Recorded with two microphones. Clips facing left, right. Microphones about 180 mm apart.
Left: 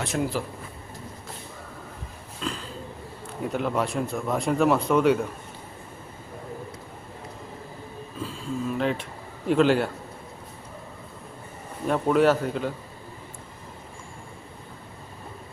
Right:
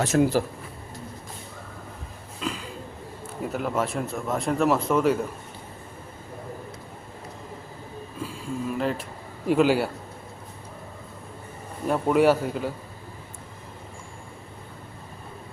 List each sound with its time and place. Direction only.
0.0 s speech: 40° right (ahead or behind)
2.4 s a sound: 5° right (ahead or behind)
3.5 s speech: centre (ahead or behind)
8.2 s a sound: 5° right (ahead or behind)
9.5 s a man's voice: 5° right (ahead or behind)
11.9 s a man's voice: 5° right (ahead or behind)